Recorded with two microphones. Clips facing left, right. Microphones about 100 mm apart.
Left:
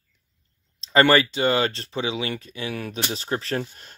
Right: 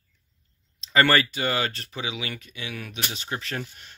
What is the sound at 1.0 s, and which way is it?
Speech, 20° left (ahead or behind).